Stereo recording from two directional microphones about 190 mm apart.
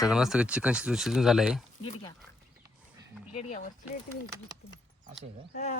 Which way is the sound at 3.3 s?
40° left (ahead or behind).